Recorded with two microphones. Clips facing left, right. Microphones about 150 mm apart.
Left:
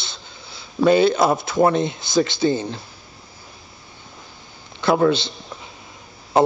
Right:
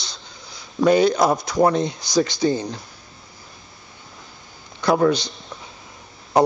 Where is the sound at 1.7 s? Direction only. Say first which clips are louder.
Left 1 dB; 25° left (ahead or behind).